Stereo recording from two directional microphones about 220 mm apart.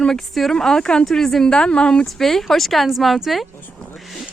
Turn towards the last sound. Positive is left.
turn(degrees=0)  # may be behind; listen again after turning